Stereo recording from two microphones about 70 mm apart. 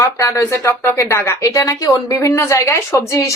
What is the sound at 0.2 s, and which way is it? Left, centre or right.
A woman's voice, left.